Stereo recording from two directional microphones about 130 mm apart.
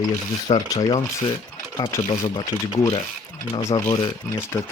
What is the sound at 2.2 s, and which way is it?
Speech, 30° left (ahead or behind).